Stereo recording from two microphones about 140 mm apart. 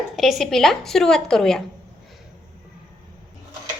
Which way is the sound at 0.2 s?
Centre (ahead or behind).